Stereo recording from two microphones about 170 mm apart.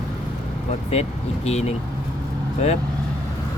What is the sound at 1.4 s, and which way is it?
Speech, 40° left (ahead or behind).